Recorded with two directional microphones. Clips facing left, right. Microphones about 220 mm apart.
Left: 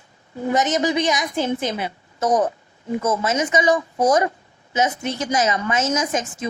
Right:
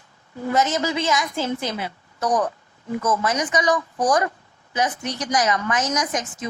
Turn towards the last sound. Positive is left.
turn(degrees=25)  # may be behind; listen again after turning